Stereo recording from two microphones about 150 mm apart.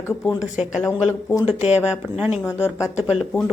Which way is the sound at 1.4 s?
45° left (ahead or behind).